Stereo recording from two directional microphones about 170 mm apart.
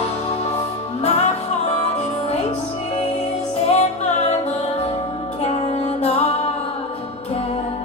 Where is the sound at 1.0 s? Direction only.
40° left (ahead or behind).